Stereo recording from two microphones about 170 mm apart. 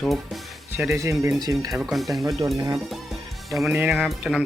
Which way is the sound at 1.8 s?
Centre (ahead or behind).